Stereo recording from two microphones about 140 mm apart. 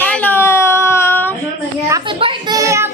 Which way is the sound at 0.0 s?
10° left (ahead or behind).